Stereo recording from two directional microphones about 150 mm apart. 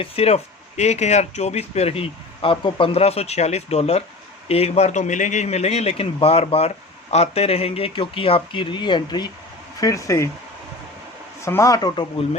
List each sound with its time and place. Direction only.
0.0 s a man's voice: 40° left (ahead or behind); by 10.2 s 20° left (ahead or behind)
11.4 s speech: 20° left (ahead or behind)